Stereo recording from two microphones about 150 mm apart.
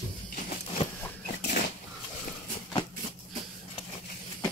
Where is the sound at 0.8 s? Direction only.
40° left (ahead or behind).